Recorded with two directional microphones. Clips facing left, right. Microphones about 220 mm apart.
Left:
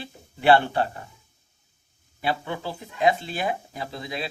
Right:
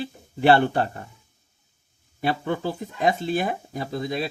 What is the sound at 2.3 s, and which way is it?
Speech, 45° right (ahead or behind).